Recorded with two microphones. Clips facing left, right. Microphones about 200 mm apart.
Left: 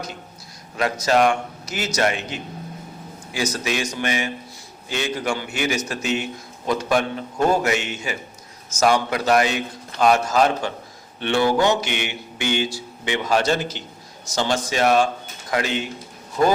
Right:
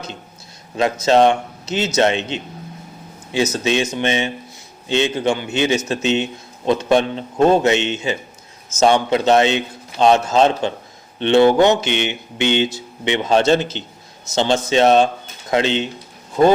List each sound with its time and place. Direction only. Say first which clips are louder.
0.8 s a man's voice: right 5 dB; 25° right (ahead or behind)